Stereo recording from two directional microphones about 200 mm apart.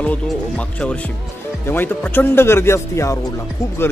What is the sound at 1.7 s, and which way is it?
Speech, 10° left (ahead or behind).